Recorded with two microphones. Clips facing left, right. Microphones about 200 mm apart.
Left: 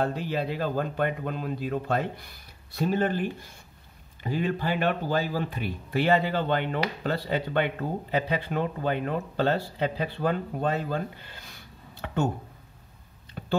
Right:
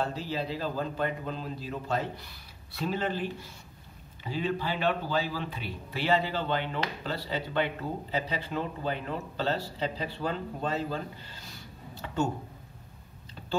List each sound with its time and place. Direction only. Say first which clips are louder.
0.0 s speech: left 4 dB; 55° left (ahead or behind)